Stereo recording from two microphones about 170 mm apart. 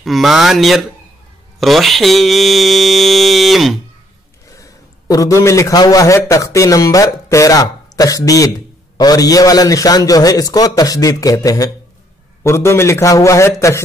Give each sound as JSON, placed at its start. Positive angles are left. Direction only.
{"t": 0.0, "sound": "mantra", "side_deg": 0}
{"t": 4.5, "sound": "a man's voice", "side_deg": 20}